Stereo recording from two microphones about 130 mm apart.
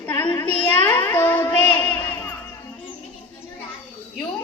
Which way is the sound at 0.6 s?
15° left (ahead or behind).